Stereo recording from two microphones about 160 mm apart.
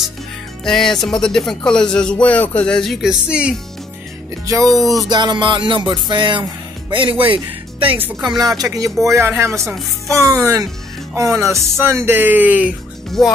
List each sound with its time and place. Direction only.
0.7 s speech: 5° left (ahead or behind)
4.6 s speech: centre (ahead or behind)
5.1 s music: 30° right (ahead or behind)
6.9 s speech: 30° right (ahead or behind)
8.2 s music: 25° right (ahead or behind)
9.0 s speech: 15° right (ahead or behind)
10.1 s music: 20° right (ahead or behind)
11.8 s speech: 15° right (ahead or behind)